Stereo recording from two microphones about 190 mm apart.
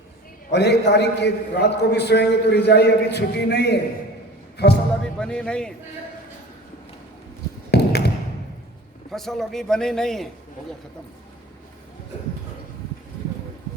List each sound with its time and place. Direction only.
0.5 s a man's voice: 65° left (ahead or behind)
4.5 s music: 60° left (ahead or behind)
5.0 s speech: 5° left (ahead or behind)
7.7 s tap: 60° left (ahead or behind)
9.1 s a man's voice: centre (ahead or behind)